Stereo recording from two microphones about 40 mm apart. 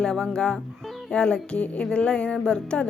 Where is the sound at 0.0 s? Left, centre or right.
Centre.